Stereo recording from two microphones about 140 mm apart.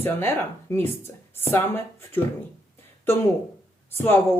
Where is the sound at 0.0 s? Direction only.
15° left (ahead or behind).